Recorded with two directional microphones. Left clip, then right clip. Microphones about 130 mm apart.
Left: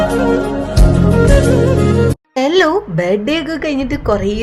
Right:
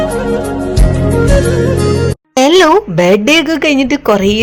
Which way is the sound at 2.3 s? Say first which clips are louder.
Right 6 dB; 25° right (ahead or behind).